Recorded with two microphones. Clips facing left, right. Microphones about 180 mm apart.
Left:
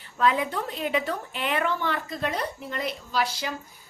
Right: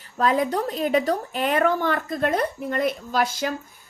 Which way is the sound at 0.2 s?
40° right (ahead or behind).